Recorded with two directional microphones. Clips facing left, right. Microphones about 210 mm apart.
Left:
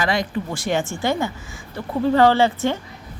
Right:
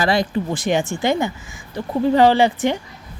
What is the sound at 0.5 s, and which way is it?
A man's voice, 20° right (ahead or behind).